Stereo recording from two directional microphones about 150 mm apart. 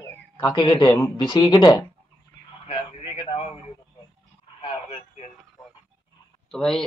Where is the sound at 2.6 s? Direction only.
40° left (ahead or behind).